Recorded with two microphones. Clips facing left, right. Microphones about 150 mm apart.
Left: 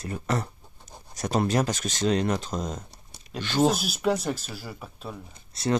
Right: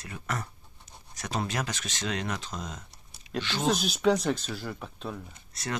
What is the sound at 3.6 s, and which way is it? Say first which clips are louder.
Speech: right 1 dB; 5° left (ahead or behind).